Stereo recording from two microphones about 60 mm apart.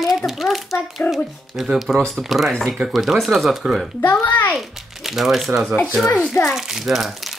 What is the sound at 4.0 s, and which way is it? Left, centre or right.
Speech, left.